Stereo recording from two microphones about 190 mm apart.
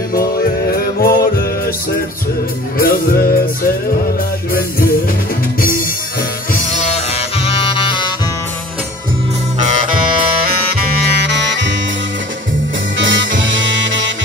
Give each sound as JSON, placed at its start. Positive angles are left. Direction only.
{"t": 0.1, "sound": "music", "side_deg": 50}
{"t": 2.8, "sound": "music", "side_deg": 50}
{"t": 6.7, "sound": "music", "side_deg": 35}
{"t": 10.4, "sound": "music", "side_deg": -60}
{"t": 12.9, "sound": "music", "side_deg": -75}